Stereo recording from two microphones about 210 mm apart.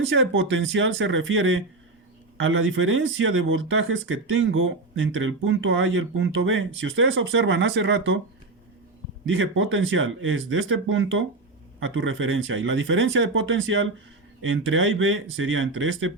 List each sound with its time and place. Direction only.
0.1 s speech: 60° right (ahead or behind)
9.2 s speech: 65° right (ahead or behind)